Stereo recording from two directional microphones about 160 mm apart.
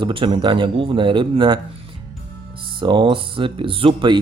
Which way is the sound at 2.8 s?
30° right (ahead or behind).